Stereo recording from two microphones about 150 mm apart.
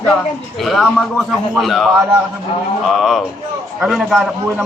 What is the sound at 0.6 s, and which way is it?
A man's voice, centre (ahead or behind).